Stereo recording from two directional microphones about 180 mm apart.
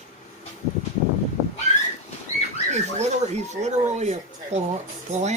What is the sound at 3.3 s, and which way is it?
Speech, 40° right (ahead or behind).